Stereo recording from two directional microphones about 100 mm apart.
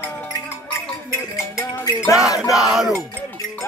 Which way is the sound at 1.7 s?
25° left (ahead or behind).